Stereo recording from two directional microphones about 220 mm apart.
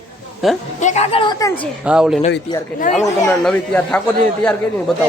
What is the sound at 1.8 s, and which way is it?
Speech, 5° right (ahead or behind).